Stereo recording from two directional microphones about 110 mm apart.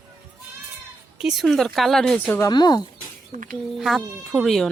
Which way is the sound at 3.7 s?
Centre (ahead or behind).